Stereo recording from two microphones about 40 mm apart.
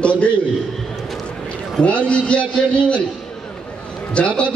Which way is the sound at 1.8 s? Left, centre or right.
Left.